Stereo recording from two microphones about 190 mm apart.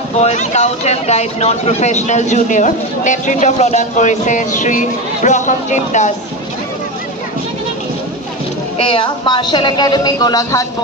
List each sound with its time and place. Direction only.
0.2 s speech: 35° left (ahead or behind)
8.7 s speech: 25° left (ahead or behind)